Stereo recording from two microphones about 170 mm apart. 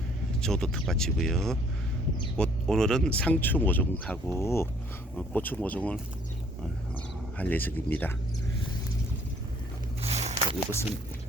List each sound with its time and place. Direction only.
0.4 s speech: 5° left (ahead or behind)
7.3 s speech: 10° left (ahead or behind)
10.0 s a sound: 40° right (ahead or behind)